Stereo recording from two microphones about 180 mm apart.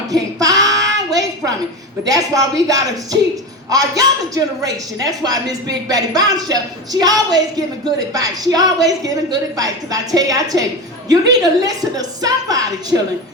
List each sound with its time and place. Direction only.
0.1 s child singing: 20° right (ahead or behind)
2.0 s a woman's voice: 20° right (ahead or behind)